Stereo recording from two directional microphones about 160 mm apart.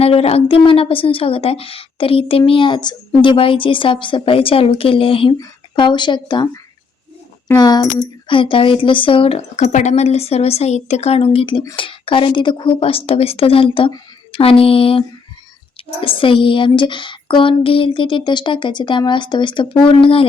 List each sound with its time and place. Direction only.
0.0 s a woman's voice: 40° left (ahead or behind)